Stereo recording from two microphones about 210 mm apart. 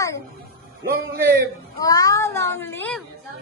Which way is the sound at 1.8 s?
15° left (ahead or behind).